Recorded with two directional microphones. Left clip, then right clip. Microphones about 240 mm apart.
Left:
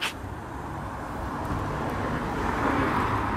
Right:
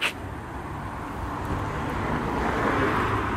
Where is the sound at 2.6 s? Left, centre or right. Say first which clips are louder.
Even; left.